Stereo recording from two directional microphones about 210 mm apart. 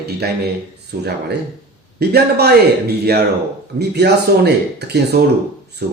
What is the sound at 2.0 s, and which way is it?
Speech, 50° right (ahead or behind).